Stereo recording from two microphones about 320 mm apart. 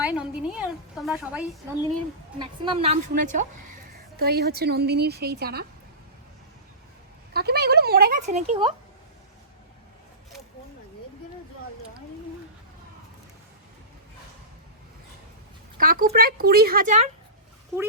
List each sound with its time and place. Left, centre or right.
0.0 s a woman's voice: centre
2.4 s a woman's voice: centre
7.3 s a woman's voice: right
15.8 s a woman's voice: right